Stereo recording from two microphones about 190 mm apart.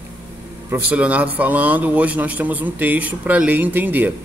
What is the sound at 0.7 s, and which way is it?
A man's voice, 5° right (ahead or behind).